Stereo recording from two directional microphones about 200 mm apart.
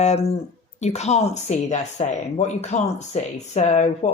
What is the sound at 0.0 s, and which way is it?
Speech, 35° left (ahead or behind).